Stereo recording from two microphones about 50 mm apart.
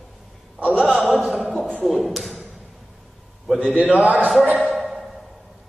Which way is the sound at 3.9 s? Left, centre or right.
Right.